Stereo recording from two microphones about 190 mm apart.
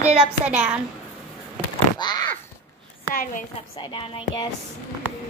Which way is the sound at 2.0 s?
20° left (ahead or behind).